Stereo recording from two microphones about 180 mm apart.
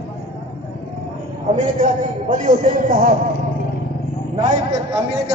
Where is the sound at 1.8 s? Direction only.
45° right (ahead or behind).